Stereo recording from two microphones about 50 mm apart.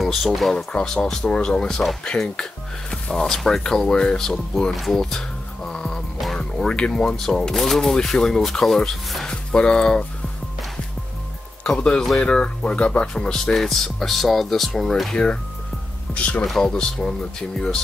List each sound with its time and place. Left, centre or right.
0.0 s speech: centre
0.7 s speech: centre
2.9 s speech: centre
5.7 s music: centre
6.1 s music: centre
6.7 s speech: centre
11.6 s speech: centre
16.2 s speech: left
16.4 s speech: centre